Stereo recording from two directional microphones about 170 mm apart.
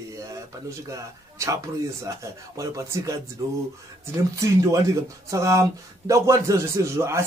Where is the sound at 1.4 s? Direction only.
15° right (ahead or behind).